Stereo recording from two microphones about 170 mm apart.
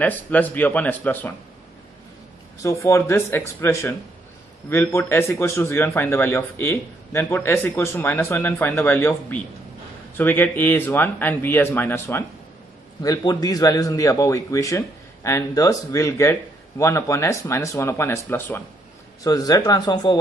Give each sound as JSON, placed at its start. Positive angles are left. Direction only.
{"t": 0.0, "sound": "a man's voice", "side_deg": 10}
{"t": 2.6, "sound": "a man's voice", "side_deg": 20}